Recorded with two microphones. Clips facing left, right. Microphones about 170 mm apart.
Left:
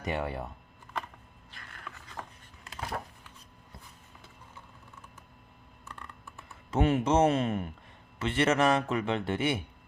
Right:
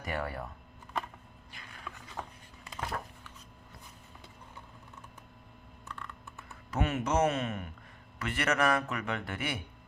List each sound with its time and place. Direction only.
0.0 s a man's voice: 20° left (ahead or behind)
1.7 s a sound: 10° right (ahead or behind)
6.7 s a man's voice: 30° left (ahead or behind)